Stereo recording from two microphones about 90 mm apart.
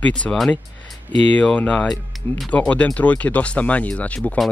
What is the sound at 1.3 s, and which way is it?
Speech, 15° left (ahead or behind).